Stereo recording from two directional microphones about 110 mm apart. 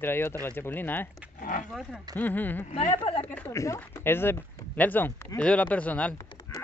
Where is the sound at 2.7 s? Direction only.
90° left.